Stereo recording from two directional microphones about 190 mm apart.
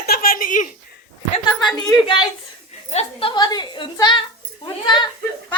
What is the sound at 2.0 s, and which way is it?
A woman's voice, 25° left (ahead or behind).